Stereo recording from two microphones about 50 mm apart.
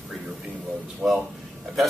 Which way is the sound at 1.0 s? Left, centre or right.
Centre.